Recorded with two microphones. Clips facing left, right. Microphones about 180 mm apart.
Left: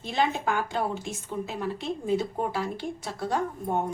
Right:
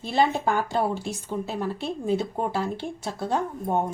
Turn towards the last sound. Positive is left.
turn(degrees=-25)  # may be behind; listen again after turning